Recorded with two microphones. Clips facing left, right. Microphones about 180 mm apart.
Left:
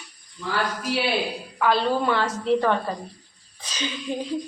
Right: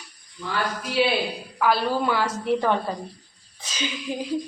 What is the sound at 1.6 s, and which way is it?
A woman's voice, 10° right (ahead or behind).